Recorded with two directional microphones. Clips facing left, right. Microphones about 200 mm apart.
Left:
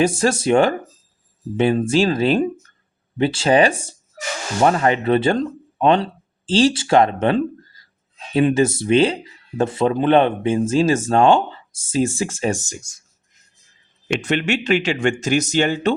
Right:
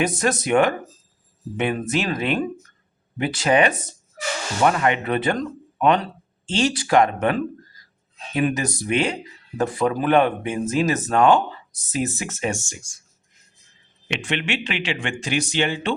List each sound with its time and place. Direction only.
0.0 s speech: 30° left (ahead or behind)
14.1 s speech: 40° left (ahead or behind)